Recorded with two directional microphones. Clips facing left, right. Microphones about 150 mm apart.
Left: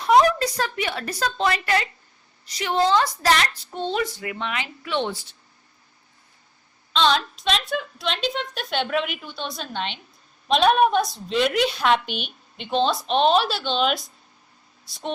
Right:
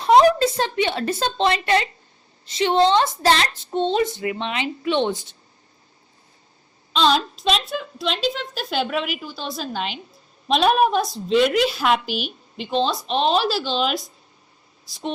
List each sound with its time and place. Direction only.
0.0 s a woman's voice: 30° right (ahead or behind)
7.4 s a woman's voice: centre (ahead or behind)